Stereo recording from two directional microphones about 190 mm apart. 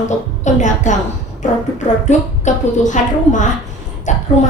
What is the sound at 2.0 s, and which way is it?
A woman's voice, 40° left (ahead or behind).